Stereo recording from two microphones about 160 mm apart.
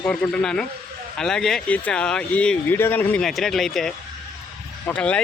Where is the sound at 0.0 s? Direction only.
5° left (ahead or behind).